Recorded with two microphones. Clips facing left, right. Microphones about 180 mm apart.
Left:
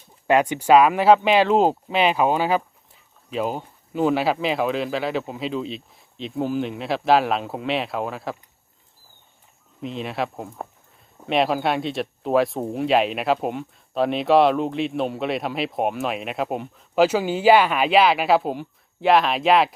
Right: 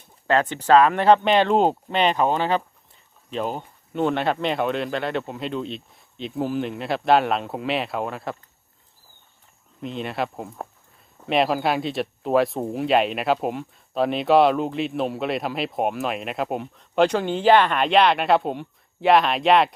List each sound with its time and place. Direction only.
0.3 s speech: 15° left (ahead or behind)
9.8 s speech: centre (ahead or behind)